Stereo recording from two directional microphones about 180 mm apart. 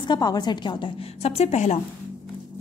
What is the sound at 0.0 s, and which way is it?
A woman's voice, 25° left (ahead or behind).